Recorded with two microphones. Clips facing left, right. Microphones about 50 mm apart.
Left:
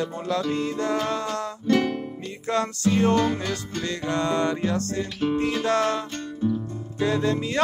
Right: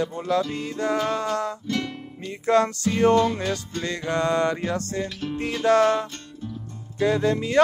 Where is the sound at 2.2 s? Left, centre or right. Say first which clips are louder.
Right 6 dB; right.